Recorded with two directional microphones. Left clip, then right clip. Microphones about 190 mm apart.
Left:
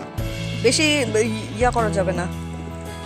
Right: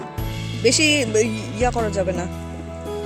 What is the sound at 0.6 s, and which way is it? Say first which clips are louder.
Speech: right 1 dB; 20° right (ahead or behind).